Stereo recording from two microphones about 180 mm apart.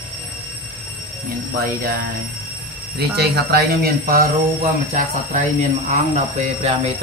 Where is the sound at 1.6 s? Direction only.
55° right (ahead or behind).